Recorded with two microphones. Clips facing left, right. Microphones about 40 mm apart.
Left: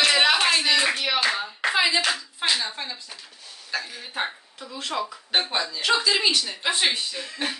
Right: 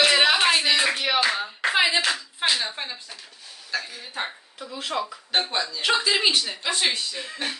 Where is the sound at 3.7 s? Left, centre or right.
Centre.